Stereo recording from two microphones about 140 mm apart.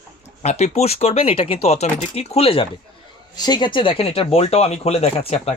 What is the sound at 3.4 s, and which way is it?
Speech, 30° left (ahead or behind).